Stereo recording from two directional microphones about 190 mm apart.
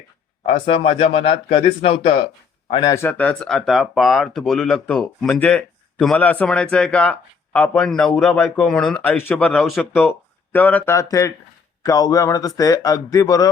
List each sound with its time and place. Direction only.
0.6 s speech: 35° left (ahead or behind)
2.9 s a man's voice: 10° left (ahead or behind)